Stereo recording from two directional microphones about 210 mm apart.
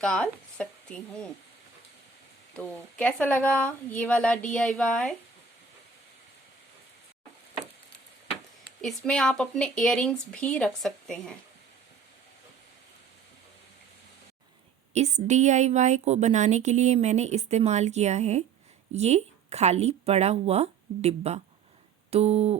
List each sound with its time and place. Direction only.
0.0 s speech: 5° left (ahead or behind)
2.6 s a woman's voice: 5° left (ahead or behind)
8.8 s speech: centre (ahead or behind)
14.9 s a woman's voice: 35° right (ahead or behind)
22.1 s a sound: 30° right (ahead or behind)